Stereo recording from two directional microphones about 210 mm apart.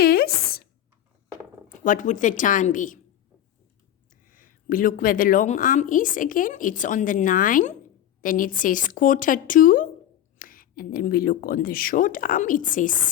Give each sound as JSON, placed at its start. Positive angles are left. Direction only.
{"t": 0.0, "sound": "a sound", "side_deg": 45}
{"t": 1.8, "sound": "speech", "side_deg": 40}
{"t": 4.1, "sound": "speech", "side_deg": 40}